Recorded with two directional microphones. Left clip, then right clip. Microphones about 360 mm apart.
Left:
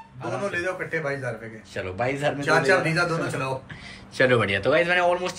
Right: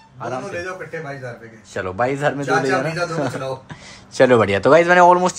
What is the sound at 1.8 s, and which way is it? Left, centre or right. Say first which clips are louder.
Speech: right 6 dB; centre.